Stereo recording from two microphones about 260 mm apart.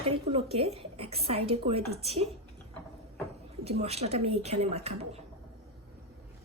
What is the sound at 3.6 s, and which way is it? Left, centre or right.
A woman's voice, right.